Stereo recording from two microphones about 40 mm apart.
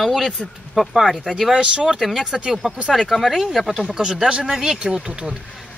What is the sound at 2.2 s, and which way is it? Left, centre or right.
Speech, right.